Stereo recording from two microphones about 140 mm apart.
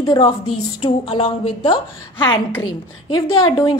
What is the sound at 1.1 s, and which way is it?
A woman's voice, 35° left (ahead or behind).